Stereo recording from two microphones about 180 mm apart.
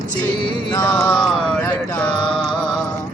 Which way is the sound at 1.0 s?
5° left (ahead or behind).